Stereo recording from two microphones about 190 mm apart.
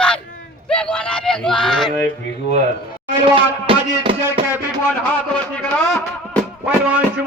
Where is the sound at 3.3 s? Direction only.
25° right (ahead or behind).